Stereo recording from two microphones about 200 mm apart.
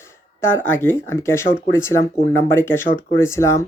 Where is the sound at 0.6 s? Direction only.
10° left (ahead or behind).